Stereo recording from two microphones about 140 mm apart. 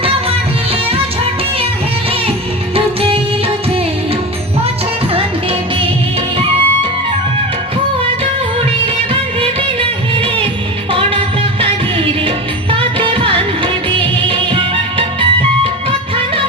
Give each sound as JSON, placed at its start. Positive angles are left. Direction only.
{"t": 0.0, "sound": "music", "side_deg": -40}
{"t": 2.7, "sound": "music of bollywood", "side_deg": -45}
{"t": 12.7, "sound": "music", "side_deg": -40}